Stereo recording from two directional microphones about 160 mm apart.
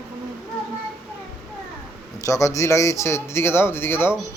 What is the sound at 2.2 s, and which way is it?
Speech, 20° left (ahead or behind).